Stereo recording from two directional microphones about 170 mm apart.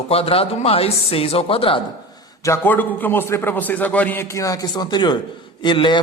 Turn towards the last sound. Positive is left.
turn(degrees=30)  # may be behind; listen again after turning